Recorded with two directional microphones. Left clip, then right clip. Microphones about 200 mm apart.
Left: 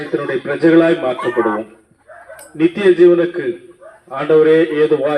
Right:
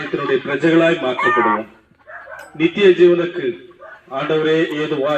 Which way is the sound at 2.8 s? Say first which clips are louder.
Left 2 dB; 30° left (ahead or behind).